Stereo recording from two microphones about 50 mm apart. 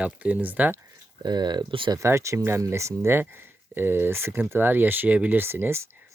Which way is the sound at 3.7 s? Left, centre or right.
Right.